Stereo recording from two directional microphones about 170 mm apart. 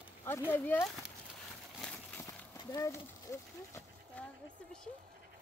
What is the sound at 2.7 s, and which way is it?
Speech, 15° left (ahead or behind).